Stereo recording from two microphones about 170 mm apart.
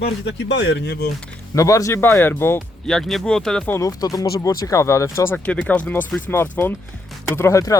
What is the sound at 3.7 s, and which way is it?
Speech, 20° left (ahead or behind).